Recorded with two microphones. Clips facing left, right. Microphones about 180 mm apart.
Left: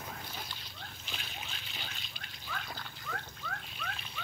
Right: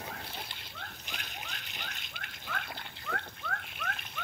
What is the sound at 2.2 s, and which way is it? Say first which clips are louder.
Water: right 2 dB; 65° right (ahead or behind).